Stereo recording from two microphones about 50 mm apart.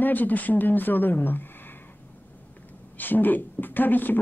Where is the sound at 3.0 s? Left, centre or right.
Left.